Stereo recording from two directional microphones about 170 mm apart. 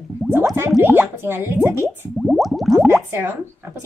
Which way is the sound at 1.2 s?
15° right (ahead or behind).